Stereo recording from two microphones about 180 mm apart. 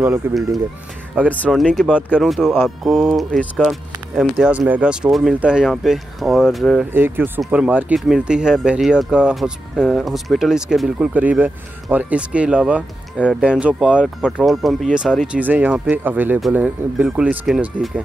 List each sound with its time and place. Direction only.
0.2 s speech: 10° right (ahead or behind)
1.4 s speech: 5° left (ahead or behind)
4.2 s speech: 5° right (ahead or behind)
6.9 s speech: 10° right (ahead or behind)